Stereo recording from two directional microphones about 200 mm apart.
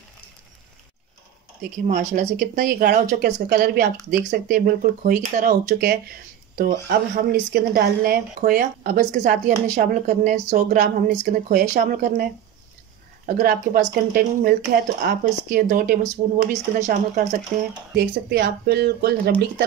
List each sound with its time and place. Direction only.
1.6 s a woman's voice: 40° right (ahead or behind)
13.3 s a woman's voice: 45° right (ahead or behind)
17.9 s speech: 55° right (ahead or behind)